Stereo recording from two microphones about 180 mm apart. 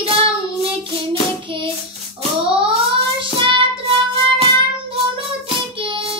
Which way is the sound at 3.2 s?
25° right (ahead or behind).